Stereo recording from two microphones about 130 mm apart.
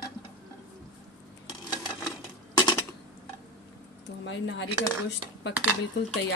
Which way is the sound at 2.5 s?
35° left (ahead or behind).